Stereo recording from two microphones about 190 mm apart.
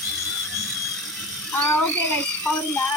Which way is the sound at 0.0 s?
Centre (ahead or behind).